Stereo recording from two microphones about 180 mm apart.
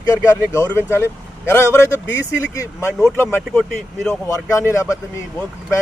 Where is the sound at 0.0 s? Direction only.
15° left (ahead or behind).